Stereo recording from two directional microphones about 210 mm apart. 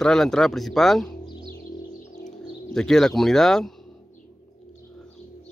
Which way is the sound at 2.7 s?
Centre (ahead or behind).